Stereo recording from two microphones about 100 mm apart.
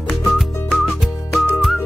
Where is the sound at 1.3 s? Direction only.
Centre (ahead or behind).